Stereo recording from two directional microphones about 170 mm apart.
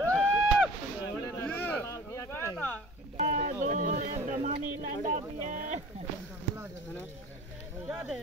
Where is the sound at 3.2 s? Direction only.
40° right (ahead or behind).